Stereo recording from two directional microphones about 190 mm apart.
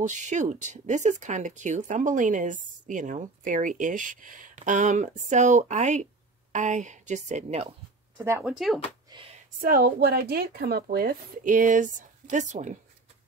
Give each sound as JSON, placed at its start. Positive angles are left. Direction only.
{"t": 0.0, "sound": "speech", "side_deg": -40}
{"t": 8.2, "sound": "speech", "side_deg": -10}
{"t": 8.5, "sound": "speech", "side_deg": 0}
{"t": 9.7, "sound": "speech", "side_deg": -50}